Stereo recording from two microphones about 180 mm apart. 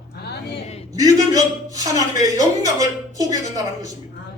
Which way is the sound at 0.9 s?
20° right (ahead or behind).